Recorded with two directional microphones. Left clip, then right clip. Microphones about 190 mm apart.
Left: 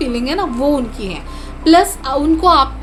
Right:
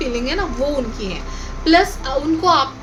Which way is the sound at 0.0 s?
45° left (ahead or behind).